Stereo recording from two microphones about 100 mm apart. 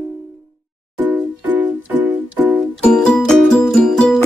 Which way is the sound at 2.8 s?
5° left (ahead or behind).